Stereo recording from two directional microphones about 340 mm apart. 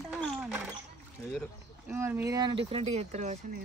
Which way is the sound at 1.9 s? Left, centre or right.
Centre.